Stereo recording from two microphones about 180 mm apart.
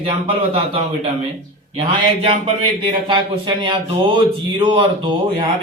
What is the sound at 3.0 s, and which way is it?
A man's voice, 30° right (ahead or behind).